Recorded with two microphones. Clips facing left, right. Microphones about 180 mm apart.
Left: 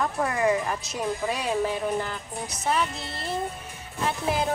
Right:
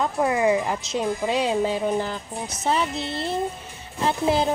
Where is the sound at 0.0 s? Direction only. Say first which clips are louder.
Right 4 dB; 20° right (ahead or behind).